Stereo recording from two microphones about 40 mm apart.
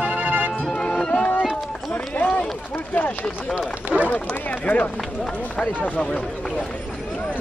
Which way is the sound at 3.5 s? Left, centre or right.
Right.